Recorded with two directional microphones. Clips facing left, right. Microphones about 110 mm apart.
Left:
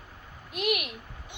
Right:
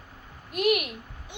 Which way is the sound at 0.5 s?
45° right (ahead or behind).